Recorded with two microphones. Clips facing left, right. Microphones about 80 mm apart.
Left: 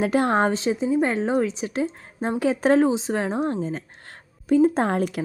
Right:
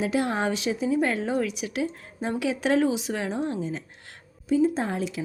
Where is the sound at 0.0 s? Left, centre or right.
Left.